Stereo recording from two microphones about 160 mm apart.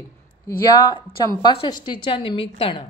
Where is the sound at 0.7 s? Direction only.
20° left (ahead or behind).